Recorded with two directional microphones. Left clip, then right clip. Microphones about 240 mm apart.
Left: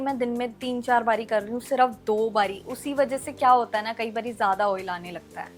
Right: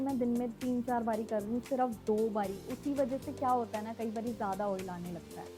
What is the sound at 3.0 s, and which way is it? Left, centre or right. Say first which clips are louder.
A woman's voice: left 11 dB; centre.